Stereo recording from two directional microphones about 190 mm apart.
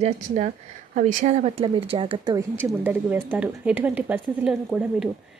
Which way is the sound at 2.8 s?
10° right (ahead or behind).